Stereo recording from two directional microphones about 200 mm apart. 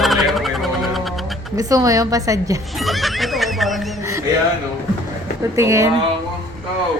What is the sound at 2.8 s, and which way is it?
Neigh, centre (ahead or behind).